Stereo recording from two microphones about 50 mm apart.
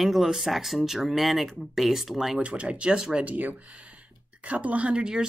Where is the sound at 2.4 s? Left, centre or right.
Right.